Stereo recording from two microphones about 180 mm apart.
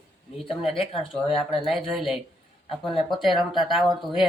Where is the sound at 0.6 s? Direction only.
30° left (ahead or behind).